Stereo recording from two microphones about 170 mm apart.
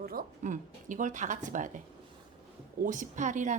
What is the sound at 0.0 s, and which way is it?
A woman's voice, 60° right (ahead or behind).